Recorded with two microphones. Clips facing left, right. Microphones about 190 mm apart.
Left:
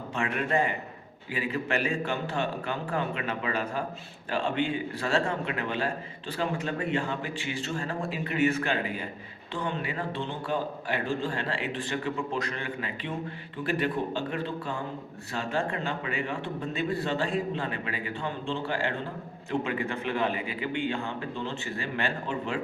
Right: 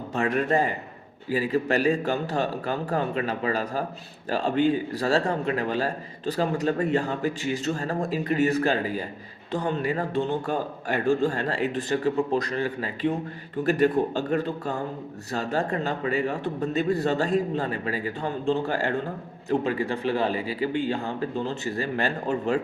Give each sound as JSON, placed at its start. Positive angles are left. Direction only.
{"t": 0.1, "sound": "a man's voice", "side_deg": -40}